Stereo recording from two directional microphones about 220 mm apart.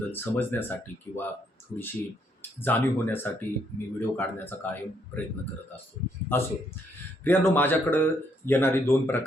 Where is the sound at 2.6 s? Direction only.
10° left (ahead or behind).